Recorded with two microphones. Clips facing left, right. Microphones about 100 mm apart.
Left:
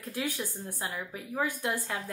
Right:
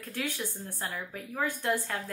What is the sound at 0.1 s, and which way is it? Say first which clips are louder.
A woman's voice: left 1 dB; 15° left (ahead or behind).